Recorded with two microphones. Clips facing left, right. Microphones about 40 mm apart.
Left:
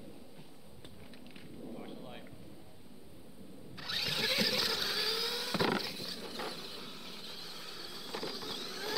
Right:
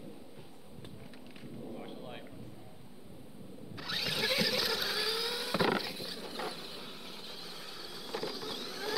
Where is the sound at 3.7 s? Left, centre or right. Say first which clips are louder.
Right 1 dB; centre.